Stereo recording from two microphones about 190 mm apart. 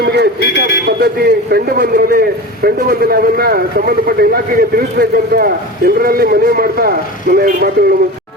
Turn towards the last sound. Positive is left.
turn(degrees=-50)  # may be behind; listen again after turning